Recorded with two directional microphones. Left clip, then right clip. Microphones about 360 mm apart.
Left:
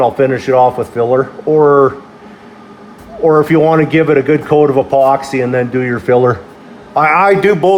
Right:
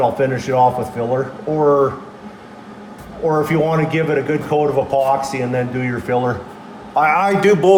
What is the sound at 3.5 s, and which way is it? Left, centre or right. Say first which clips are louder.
A man's voice: left 7 dB; left.